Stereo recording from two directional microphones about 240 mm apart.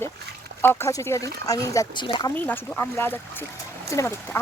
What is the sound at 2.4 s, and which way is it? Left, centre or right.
Speech, centre.